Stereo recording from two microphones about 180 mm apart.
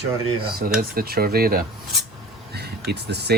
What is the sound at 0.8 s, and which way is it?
Speech, 55° right (ahead or behind).